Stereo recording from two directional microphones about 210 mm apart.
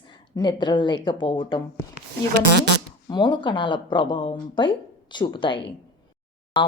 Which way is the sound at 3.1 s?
20° left (ahead or behind).